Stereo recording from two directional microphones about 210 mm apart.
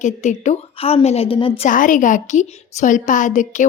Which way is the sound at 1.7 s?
40° left (ahead or behind).